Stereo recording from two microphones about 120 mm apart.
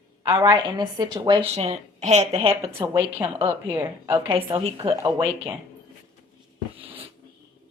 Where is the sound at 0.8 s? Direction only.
35° right (ahead or behind).